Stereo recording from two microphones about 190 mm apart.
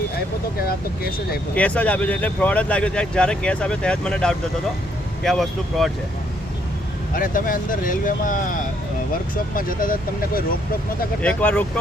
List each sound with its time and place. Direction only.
1.5 s speech: 5° left (ahead or behind)
7.1 s speech: 45° left (ahead or behind)
11.2 s speech: 5° left (ahead or behind)